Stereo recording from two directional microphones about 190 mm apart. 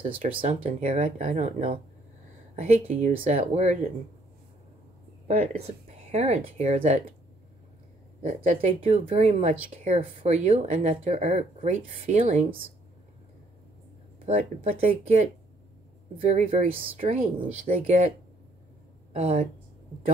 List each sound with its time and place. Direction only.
0.3 s speech: 30° right (ahead or behind)
0.7 s speech: 40° right (ahead or behind)
5.3 s speech: 35° right (ahead or behind)
8.5 s speech: 35° right (ahead or behind)
14.2 s speech: 35° right (ahead or behind)
19.1 s speech: 35° right (ahead or behind)